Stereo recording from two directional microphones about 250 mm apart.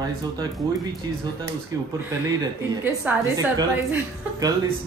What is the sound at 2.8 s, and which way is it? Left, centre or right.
A woman's voice, centre.